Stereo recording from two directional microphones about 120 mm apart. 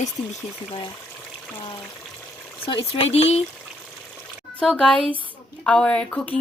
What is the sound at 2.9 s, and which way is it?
Speech, 55° left (ahead or behind).